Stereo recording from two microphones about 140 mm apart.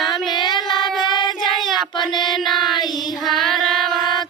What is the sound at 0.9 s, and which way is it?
Child singing, 35° left (ahead or behind).